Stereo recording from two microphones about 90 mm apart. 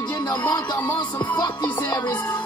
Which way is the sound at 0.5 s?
45° left (ahead or behind).